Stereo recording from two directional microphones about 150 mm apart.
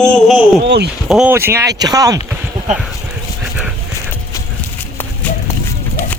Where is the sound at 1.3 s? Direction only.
15° right (ahead or behind).